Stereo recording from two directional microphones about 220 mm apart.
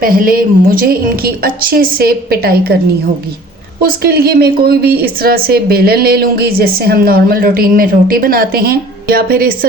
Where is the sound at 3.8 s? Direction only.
45° right (ahead or behind).